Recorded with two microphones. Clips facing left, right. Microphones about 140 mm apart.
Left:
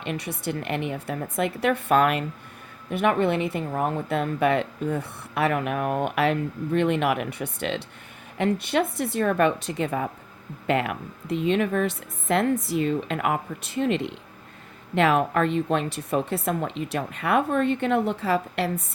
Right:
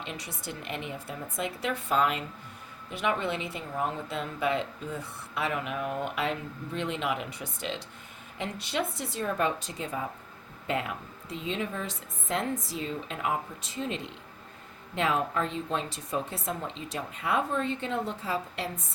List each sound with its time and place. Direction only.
0.0 s a woman's voice: 60° left (ahead or behind)